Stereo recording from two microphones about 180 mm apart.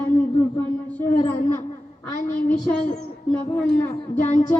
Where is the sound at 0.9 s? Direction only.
10° left (ahead or behind).